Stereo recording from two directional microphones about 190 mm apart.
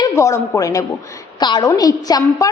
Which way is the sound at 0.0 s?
15° left (ahead or behind).